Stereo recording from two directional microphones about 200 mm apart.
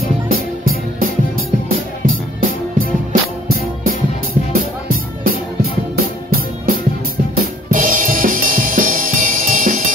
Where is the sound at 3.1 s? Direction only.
45° right (ahead or behind).